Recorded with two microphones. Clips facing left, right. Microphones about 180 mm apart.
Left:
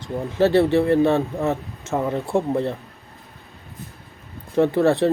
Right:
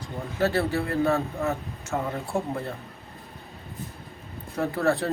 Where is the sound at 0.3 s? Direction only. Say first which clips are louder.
Left 8 dB; 25° left (ahead or behind).